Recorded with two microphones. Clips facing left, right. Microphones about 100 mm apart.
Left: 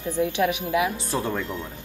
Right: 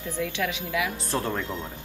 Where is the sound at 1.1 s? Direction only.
Centre (ahead or behind).